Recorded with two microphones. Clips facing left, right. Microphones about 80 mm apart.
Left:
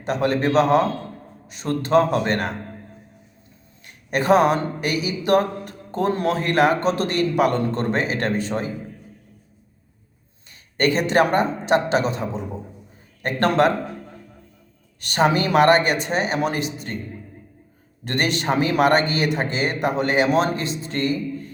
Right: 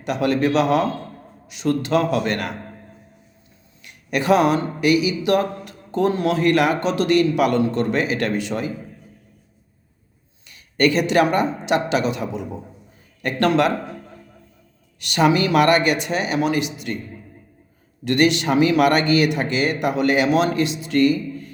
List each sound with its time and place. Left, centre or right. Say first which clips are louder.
0.0 s speech: right 1 dB; left
3.8 s speech: even; left
10.5 s speech: right 2 dB; left
15.0 s speech: right 2 dB; left
18.0 s speech: right 5 dB; left